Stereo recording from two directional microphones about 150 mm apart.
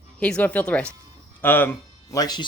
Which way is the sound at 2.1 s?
25° left (ahead or behind).